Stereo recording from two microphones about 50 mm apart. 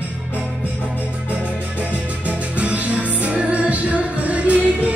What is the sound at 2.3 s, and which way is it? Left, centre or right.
Music, right.